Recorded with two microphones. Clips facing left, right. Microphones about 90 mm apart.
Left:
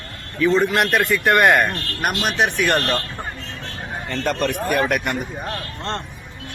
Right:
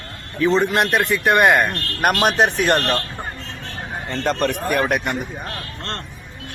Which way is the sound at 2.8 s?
15° right (ahead or behind).